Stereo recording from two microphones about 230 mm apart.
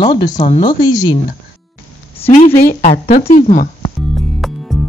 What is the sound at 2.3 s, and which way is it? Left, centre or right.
A woman's voice, left.